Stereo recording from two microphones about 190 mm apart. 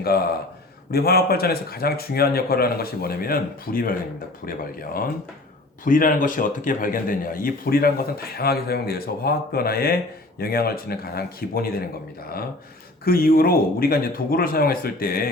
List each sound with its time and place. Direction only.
0.0 s a man's voice: 55° left (ahead or behind)
13.1 s speech: 50° left (ahead or behind)